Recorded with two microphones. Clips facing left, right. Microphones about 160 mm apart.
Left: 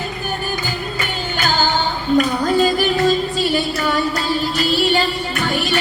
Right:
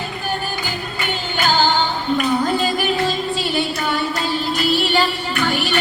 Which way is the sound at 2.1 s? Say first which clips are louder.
Left 4 dB; 45° left (ahead or behind).